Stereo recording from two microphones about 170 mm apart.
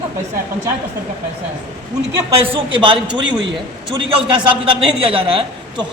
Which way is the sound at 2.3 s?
35° right (ahead or behind).